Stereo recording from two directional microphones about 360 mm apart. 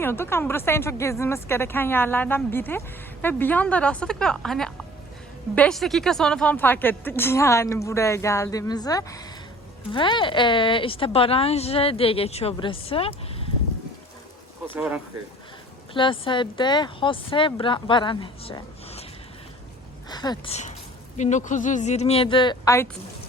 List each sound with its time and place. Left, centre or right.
0.0 s a woman's voice: centre
14.8 s speech: centre
15.9 s a woman's voice: centre
20.1 s a woman's voice: centre